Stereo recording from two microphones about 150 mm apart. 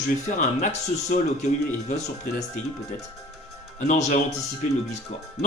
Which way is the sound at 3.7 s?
50° left (ahead or behind).